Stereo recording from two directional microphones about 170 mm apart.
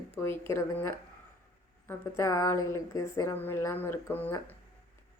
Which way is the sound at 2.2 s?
15° left (ahead or behind).